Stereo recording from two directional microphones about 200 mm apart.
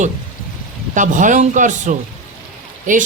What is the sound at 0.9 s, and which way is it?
A woman's voice, 40° right (ahead or behind).